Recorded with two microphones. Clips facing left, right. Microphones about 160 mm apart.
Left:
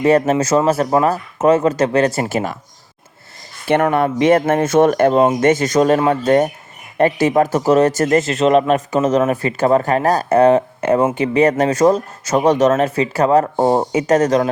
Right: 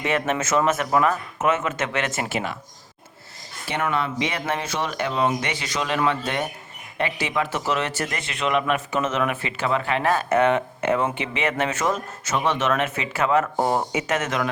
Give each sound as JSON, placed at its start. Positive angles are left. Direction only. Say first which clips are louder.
{"t": 0.0, "sound": "speech", "louder": "left 10 dB", "side_deg": 40}
{"t": 3.9, "sound": "speech", "louder": "left 12 dB", "side_deg": 50}